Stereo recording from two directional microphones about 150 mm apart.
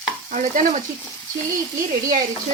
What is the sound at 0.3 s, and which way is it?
Stir, 55° right (ahead or behind).